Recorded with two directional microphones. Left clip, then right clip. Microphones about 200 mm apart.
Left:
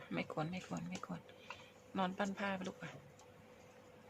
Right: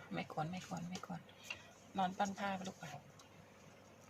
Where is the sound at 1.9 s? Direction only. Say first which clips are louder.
Right 1 dB; 25° left (ahead or behind).